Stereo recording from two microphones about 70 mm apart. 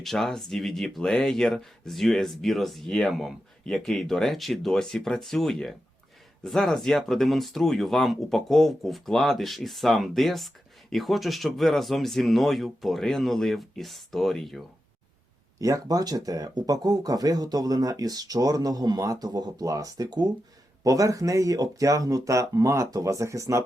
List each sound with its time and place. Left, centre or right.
0.0 s speech: centre
15.6 s speech: right
20.8 s speech: right